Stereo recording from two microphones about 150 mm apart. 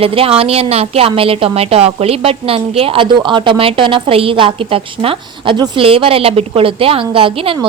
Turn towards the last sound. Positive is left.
turn(degrees=-35)  # may be behind; listen again after turning